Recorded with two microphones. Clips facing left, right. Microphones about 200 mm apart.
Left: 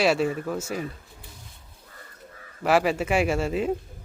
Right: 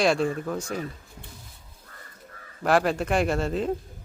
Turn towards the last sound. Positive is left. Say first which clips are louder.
# left 1 dB
turn(degrees=10)  # may be behind; listen again after turning